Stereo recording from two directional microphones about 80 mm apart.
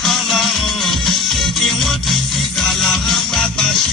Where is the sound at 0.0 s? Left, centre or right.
Centre.